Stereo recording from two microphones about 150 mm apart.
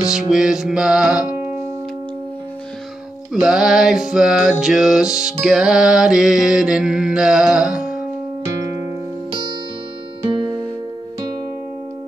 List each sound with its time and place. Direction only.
0.0 s mantra: 5° right (ahead or behind)
3.3 s mantra: centre (ahead or behind)
9.3 s music: 30° right (ahead or behind)